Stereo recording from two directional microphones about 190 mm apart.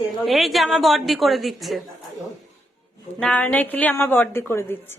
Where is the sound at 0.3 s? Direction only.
Centre (ahead or behind).